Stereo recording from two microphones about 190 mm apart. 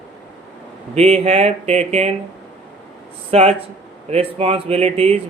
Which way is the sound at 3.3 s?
35° right (ahead or behind).